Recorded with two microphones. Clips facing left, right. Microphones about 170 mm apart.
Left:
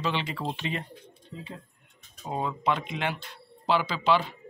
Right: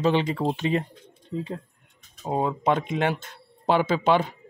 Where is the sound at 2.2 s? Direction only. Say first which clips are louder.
Right 5 dB; 40° right (ahead or behind).